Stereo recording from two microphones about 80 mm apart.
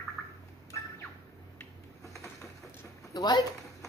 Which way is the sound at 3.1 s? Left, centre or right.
Left.